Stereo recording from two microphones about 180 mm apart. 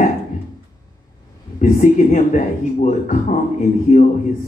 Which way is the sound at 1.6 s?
45° left (ahead or behind).